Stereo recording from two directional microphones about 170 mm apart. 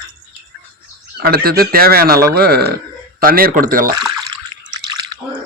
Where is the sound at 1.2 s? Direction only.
65° right (ahead or behind).